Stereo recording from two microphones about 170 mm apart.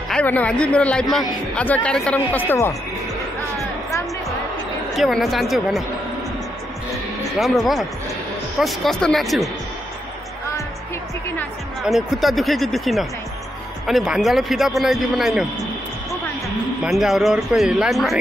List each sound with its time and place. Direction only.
0.1 s speech: 10° left (ahead or behind)
4.9 s speech: centre (ahead or behind)
7.3 s speech: centre (ahead or behind)
11.8 s speech: centre (ahead or behind)
16.4 s speech: centre (ahead or behind)